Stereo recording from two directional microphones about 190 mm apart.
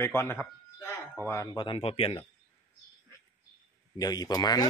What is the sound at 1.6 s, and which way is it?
Speech, 25° left (ahead or behind).